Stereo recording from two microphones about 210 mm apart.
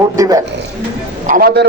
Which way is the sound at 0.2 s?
15° right (ahead or behind).